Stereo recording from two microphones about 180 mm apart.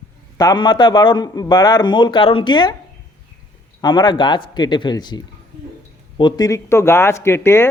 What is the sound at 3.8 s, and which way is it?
A man's voice, 25° left (ahead or behind).